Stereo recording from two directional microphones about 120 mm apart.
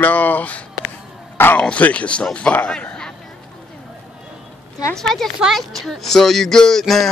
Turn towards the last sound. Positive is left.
turn(degrees=0)  # may be behind; listen again after turning